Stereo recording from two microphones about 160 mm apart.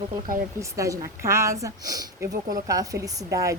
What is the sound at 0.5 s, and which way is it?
A woman's voice, 20° right (ahead or behind).